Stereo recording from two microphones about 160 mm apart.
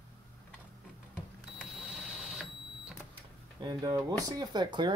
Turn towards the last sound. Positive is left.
turn(degrees=-30)  # may be behind; listen again after turning